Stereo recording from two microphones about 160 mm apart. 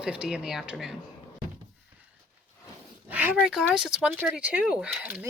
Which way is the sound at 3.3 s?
Centre (ahead or behind).